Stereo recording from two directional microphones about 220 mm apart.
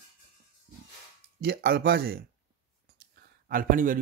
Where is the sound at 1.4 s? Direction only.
45° right (ahead or behind).